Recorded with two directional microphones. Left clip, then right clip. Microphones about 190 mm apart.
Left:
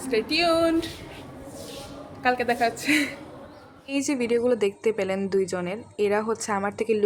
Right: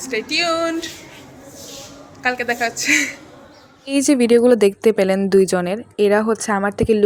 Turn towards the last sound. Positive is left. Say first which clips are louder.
# right 7 dB
turn(degrees=-30)  # may be behind; listen again after turning